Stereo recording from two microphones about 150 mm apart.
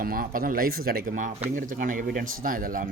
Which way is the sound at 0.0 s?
70° right (ahead or behind).